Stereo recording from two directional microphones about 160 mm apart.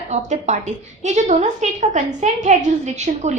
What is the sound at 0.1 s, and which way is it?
A woman's voice, 50° right (ahead or behind).